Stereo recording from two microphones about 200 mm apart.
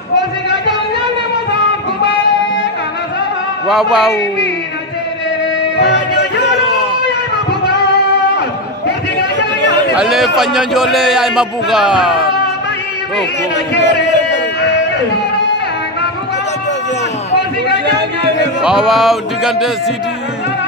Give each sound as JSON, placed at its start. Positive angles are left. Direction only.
{"t": 3.6, "sound": "a man's voice", "side_deg": 0}
{"t": 5.8, "sound": "music", "side_deg": 60}
{"t": 9.9, "sound": "a man's voice", "side_deg": 0}
{"t": 13.7, "sound": "a sound", "side_deg": 60}
{"t": 17.8, "sound": "a sound", "side_deg": -55}
{"t": 18.6, "sound": "a man's voice", "side_deg": -5}